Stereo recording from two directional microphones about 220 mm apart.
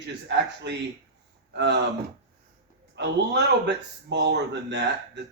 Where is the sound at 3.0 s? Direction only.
50° right (ahead or behind).